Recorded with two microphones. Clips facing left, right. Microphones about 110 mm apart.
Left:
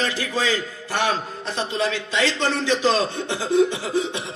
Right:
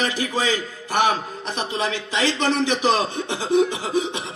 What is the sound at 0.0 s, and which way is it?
A man's voice, 20° right (ahead or behind).